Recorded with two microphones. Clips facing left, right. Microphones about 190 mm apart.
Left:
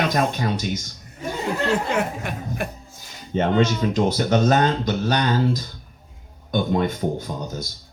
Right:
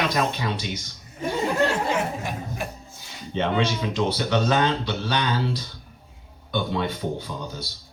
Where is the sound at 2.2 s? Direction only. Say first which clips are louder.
Left 2 dB; 60° left (ahead or behind).